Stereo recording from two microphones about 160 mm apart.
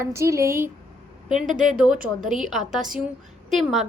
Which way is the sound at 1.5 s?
55° right (ahead or behind).